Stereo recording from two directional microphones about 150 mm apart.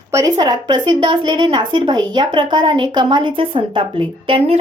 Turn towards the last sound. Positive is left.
turn(degrees=-35)  # may be behind; listen again after turning